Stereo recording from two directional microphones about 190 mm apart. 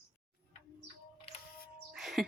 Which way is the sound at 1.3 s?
30° left (ahead or behind).